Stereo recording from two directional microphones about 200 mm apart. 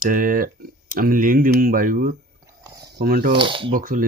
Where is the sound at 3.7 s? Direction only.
45° right (ahead or behind).